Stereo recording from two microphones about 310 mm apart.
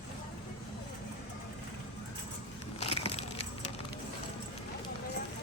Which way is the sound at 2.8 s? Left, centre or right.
Centre.